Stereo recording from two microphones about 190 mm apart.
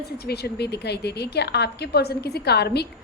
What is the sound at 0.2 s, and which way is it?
A woman's voice, 55° left (ahead or behind).